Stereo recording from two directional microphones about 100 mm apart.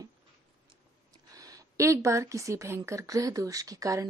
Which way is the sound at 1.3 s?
35° right (ahead or behind).